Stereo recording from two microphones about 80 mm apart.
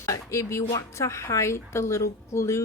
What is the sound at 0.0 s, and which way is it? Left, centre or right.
A woman's voice, left.